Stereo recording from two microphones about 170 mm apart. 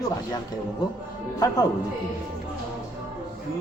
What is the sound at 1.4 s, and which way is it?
Speech, 20° left (ahead or behind).